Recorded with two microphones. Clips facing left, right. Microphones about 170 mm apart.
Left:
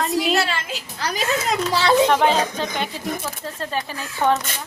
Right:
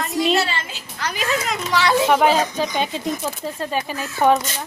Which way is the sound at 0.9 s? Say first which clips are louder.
Even; 35° left (ahead or behind).